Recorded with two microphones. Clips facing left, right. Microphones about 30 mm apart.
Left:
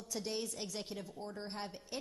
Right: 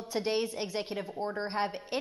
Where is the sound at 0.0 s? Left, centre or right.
Right.